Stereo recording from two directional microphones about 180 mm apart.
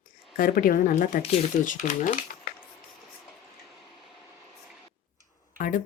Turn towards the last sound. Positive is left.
turn(degrees=50)  # may be behind; listen again after turning